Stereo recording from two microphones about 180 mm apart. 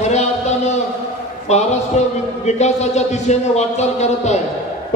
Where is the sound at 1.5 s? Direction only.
40° left (ahead or behind).